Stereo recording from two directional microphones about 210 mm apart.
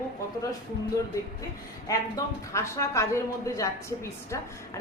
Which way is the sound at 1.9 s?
15° left (ahead or behind).